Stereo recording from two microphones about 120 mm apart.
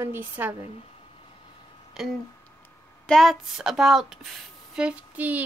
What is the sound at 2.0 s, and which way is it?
Speech, 5° right (ahead or behind).